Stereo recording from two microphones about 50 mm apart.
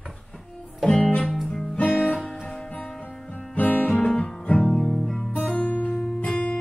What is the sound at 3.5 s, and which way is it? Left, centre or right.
Music, left.